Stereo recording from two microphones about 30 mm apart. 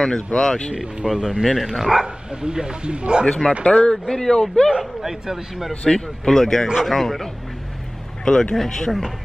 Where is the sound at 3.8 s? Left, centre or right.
Centre.